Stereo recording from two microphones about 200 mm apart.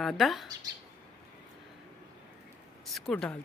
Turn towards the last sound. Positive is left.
turn(degrees=5)  # may be behind; listen again after turning